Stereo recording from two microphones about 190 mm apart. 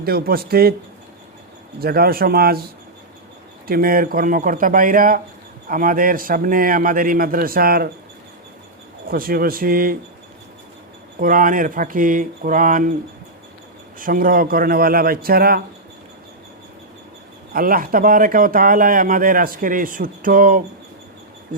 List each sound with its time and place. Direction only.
0.0 s speech: 55° right (ahead or behind)
1.8 s speech: 55° right (ahead or behind)
3.7 s speech: 50° right (ahead or behind)
9.0 s speech: 50° right (ahead or behind)
11.2 s speech: 45° right (ahead or behind)
14.0 s speech: 50° right (ahead or behind)
17.5 s speech: 50° right (ahead or behind)